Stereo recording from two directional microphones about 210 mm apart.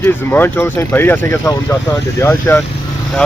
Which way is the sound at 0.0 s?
10° left (ahead or behind).